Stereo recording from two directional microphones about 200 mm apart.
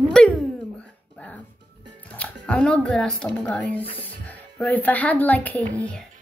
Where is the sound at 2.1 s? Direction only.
5° left (ahead or behind).